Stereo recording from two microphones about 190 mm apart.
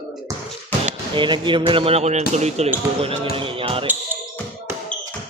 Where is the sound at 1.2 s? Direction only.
25° right (ahead or behind).